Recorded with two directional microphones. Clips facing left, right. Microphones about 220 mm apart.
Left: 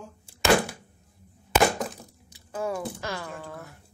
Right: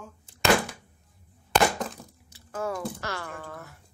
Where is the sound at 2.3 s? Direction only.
15° left (ahead or behind).